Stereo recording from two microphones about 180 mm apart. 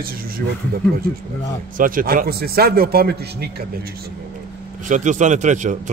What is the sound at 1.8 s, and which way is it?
A man's voice, 50° right (ahead or behind).